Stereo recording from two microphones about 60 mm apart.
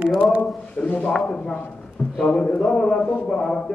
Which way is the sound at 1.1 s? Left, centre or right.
Centre.